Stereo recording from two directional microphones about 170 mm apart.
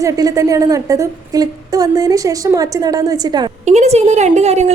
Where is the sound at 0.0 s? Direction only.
20° right (ahead or behind).